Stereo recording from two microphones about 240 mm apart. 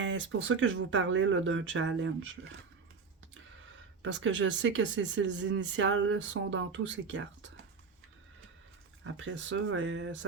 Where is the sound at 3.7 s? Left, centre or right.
Right.